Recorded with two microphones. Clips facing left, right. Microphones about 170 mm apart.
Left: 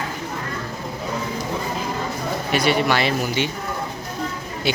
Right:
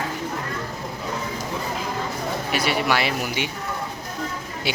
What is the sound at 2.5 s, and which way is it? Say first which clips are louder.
Speech: left 4 dB; 5° right (ahead or behind).